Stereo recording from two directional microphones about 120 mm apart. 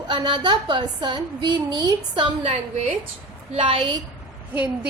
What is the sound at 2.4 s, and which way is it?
Speech, 60° right (ahead or behind).